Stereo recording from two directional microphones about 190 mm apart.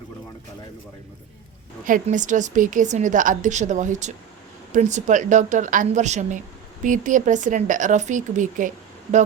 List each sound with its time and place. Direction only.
1.8 s a woman's voice: 45° right (ahead or behind)